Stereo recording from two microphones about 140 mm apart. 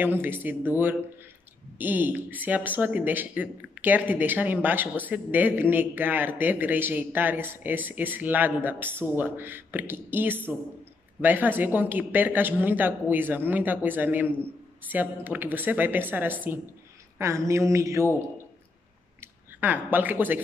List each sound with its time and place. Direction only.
0.0 s speech: 15° right (ahead or behind)
17.5 s mantra: 20° right (ahead or behind)
19.6 s speech: 15° right (ahead or behind)